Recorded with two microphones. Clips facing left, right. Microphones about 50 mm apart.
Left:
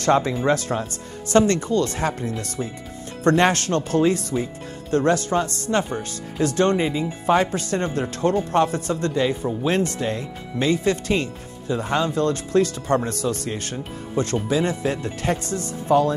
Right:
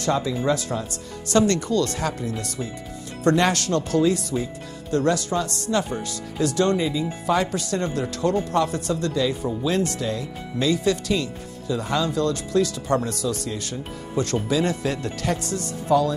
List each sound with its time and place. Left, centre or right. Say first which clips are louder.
0.0 s speech: left 4 dB; left
1.3 s speech: left 2 dB; left